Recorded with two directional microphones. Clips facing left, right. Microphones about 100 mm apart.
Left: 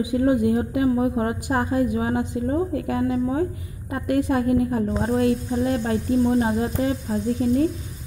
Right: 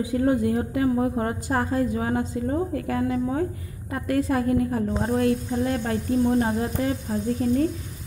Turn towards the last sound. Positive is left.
turn(degrees=10)  # may be behind; listen again after turning